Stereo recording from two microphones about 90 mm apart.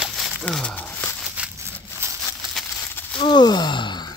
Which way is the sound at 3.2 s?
55° left (ahead or behind).